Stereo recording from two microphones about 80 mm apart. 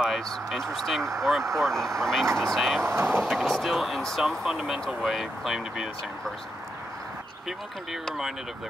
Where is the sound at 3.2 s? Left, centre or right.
Centre.